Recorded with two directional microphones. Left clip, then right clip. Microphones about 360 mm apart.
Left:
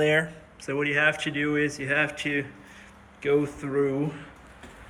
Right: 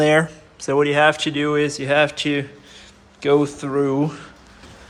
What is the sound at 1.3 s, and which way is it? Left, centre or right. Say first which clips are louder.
Speech: right 6 dB; centre.